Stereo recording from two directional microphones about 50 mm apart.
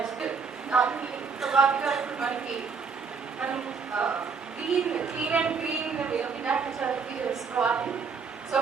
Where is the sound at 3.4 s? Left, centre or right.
Right.